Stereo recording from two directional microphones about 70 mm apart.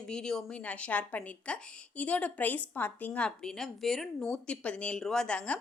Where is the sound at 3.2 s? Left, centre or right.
Centre.